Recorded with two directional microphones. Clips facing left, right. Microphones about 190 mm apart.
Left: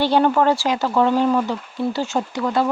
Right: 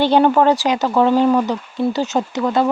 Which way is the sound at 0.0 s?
20° right (ahead or behind).